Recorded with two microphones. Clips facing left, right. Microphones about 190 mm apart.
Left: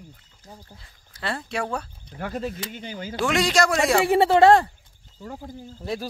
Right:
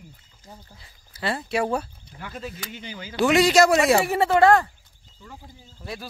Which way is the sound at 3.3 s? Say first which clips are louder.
Right 5 dB; 5° right (ahead or behind).